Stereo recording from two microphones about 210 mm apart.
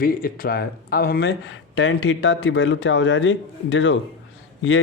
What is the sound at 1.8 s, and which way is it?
Speech, 65° left (ahead or behind).